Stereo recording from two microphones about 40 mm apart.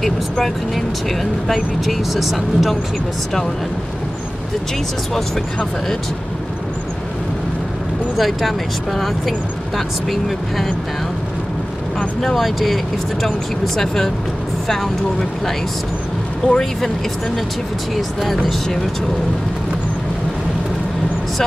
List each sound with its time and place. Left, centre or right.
0.0 s speech: centre
8.2 s speech: centre
12.2 s speech: centre
17.9 s speech: centre